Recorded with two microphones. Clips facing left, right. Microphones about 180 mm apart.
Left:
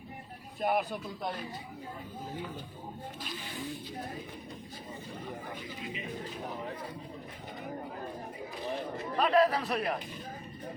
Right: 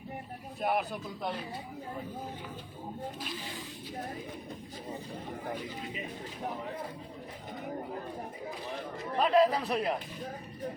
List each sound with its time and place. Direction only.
0.6 s a man's voice: centre (ahead or behind)
9.1 s a man's voice: 15° right (ahead or behind)